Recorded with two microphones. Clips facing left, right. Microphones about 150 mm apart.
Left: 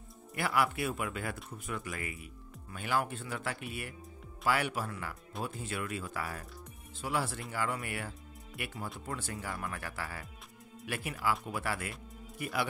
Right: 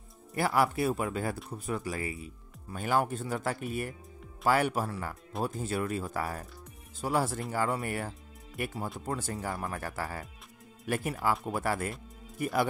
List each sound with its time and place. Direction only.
0.4 s speech: 40° right (ahead or behind)
2.8 s speech: 40° right (ahead or behind)